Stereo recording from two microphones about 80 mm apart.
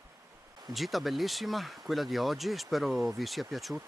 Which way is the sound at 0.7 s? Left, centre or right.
Centre.